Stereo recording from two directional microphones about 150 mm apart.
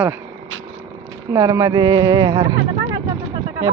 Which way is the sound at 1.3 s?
20° right (ahead or behind).